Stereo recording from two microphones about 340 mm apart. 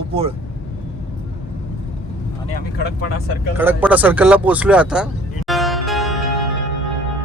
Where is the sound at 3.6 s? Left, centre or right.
Centre.